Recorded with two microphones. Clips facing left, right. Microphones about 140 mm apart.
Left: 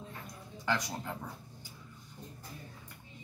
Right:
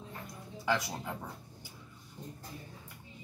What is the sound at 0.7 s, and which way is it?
Speech, 5° right (ahead or behind).